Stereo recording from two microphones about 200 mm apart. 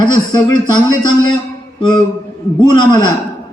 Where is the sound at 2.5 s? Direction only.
20° left (ahead or behind).